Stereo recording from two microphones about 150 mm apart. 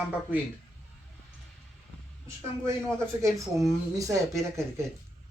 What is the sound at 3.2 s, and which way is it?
Speech, 20° right (ahead or behind).